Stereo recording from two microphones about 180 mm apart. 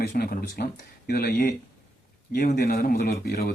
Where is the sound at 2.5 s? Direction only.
60° left (ahead or behind).